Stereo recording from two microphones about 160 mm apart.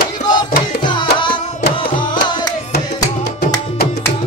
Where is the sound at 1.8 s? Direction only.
30° left (ahead or behind).